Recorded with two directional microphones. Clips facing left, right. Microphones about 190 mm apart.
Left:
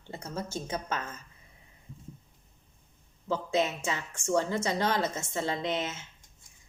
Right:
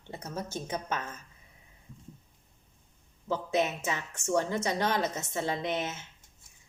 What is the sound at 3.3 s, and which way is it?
A woman's voice, 20° right (ahead or behind).